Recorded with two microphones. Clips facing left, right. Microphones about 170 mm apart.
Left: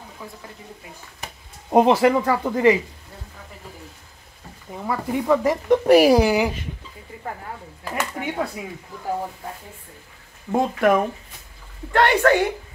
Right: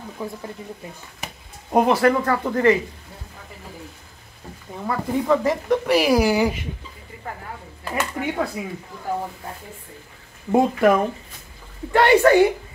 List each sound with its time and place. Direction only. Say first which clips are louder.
1.7 s speech: left 2 dB; 20° left (ahead or behind)
4.7 s speech: right 1 dB; 5° left (ahead or behind)
5.9 s speech: left 6 dB; 45° left (ahead or behind)
6.1 s speech: left 1 dB; 20° left (ahead or behind)
7.9 s speech: right 2 dB; centre (ahead or behind)
10.5 s a woman's voice: right 2 dB; centre (ahead or behind)